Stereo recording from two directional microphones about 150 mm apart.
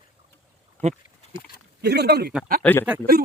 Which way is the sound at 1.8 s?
90° right.